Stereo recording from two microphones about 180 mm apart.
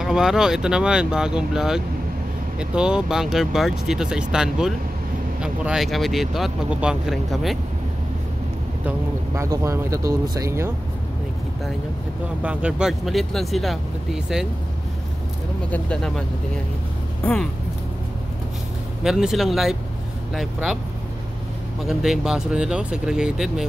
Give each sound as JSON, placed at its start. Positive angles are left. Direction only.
{"t": 0.0, "sound": "speech", "side_deg": -5}
{"t": 8.8, "sound": "speech", "side_deg": -15}
{"t": 12.4, "sound": "speech", "side_deg": -5}
{"t": 15.7, "sound": "speech", "side_deg": 5}
{"t": 19.0, "sound": "speech", "side_deg": -5}
{"t": 21.8, "sound": "speech", "side_deg": 0}